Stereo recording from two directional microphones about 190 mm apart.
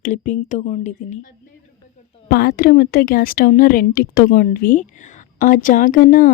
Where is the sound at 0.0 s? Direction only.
40° left (ahead or behind).